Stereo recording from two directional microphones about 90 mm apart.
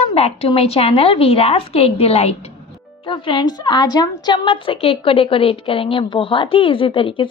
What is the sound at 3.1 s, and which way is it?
A woman's voice, 60° left (ahead or behind).